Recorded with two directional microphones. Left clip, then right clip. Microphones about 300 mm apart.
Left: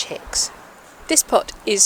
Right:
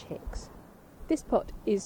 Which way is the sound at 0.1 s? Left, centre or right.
Centre.